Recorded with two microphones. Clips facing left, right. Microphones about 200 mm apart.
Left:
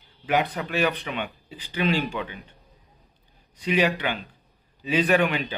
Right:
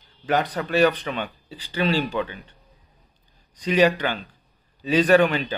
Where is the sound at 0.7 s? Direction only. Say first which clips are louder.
Right 6 dB; 40° right (ahead or behind).